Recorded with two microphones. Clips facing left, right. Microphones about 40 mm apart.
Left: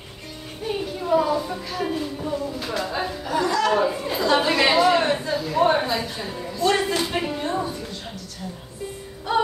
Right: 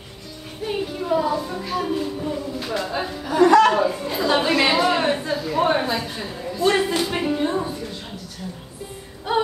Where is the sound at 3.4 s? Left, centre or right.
Right.